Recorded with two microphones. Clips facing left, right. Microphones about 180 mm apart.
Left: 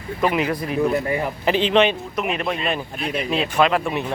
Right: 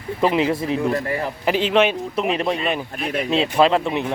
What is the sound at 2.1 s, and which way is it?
Speech, 30° right (ahead or behind).